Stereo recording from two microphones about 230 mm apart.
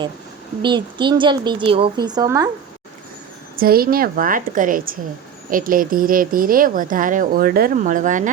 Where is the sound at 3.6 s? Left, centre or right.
Right.